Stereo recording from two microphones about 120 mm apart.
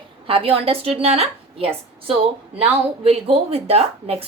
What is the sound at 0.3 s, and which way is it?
A woman's voice, 50° right (ahead or behind).